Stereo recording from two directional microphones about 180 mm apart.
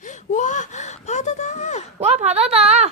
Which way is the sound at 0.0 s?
45° left (ahead or behind).